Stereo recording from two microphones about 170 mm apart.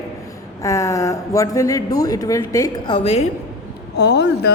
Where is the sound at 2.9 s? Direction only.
40° left (ahead or behind).